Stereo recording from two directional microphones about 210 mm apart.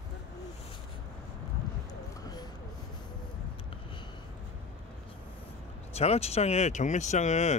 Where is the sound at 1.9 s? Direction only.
20° left (ahead or behind).